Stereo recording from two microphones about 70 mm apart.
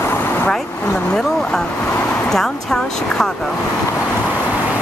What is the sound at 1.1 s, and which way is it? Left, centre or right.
Vehicle, centre.